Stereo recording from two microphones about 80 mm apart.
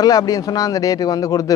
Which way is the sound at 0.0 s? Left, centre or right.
Left.